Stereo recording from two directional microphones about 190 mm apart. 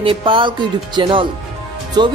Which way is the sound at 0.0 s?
25° right (ahead or behind).